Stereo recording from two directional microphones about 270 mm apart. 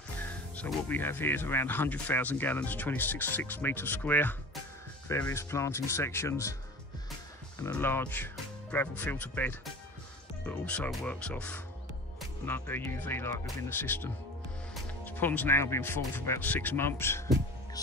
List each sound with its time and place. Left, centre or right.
0.2 s speech: centre
7.5 s speech: centre